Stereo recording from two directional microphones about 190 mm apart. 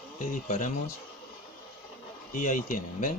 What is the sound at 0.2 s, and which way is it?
Speech, 40° left (ahead or behind).